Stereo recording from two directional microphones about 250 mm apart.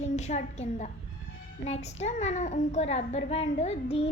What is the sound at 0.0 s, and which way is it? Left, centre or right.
A woman's voice, left.